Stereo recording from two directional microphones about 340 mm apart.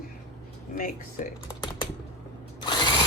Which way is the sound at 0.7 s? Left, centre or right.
Left.